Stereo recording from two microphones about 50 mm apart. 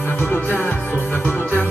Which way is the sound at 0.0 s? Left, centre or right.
Left.